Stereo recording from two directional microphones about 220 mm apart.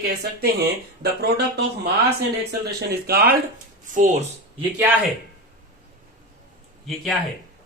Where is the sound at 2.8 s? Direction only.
45° right (ahead or behind).